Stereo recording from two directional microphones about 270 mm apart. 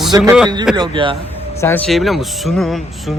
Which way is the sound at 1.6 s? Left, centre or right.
Centre.